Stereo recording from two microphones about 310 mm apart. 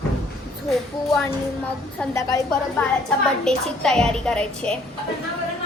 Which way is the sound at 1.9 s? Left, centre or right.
Centre.